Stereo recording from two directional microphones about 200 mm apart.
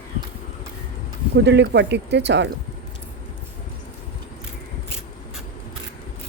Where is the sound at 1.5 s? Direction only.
60° right (ahead or behind).